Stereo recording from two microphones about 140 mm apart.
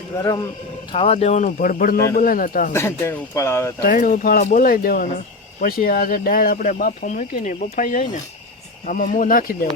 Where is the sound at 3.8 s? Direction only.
85° left.